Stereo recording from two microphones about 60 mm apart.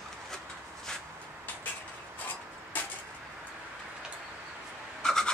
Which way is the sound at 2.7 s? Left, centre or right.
Left.